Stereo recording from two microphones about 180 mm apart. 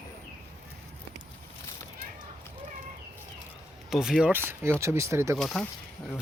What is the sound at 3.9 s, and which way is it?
Speech, 5° right (ahead or behind).